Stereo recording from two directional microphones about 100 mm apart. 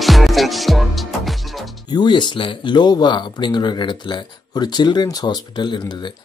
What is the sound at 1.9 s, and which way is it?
Speech, 50° left (ahead or behind).